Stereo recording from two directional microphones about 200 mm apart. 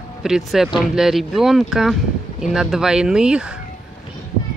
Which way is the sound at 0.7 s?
Centre (ahead or behind).